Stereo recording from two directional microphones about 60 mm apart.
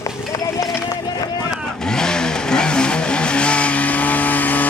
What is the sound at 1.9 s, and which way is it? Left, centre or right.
Vehicle, centre.